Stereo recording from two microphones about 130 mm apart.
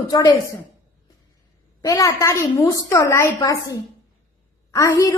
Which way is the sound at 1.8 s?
25° left (ahead or behind).